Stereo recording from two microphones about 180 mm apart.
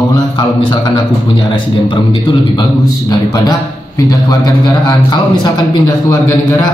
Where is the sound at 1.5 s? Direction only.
25° left (ahead or behind).